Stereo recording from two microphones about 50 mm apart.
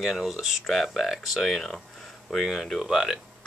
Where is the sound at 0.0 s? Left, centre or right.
Centre.